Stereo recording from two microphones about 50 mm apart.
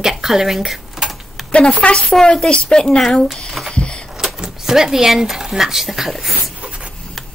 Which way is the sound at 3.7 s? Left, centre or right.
Left.